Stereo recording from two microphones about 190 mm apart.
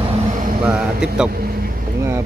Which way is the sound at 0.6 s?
5° right (ahead or behind).